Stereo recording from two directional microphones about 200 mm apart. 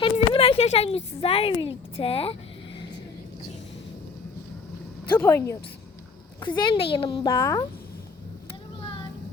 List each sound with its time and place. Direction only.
0.0 s speech: 30° left (ahead or behind)
5.1 s speech: 15° left (ahead or behind)
6.4 s speech: 25° left (ahead or behind)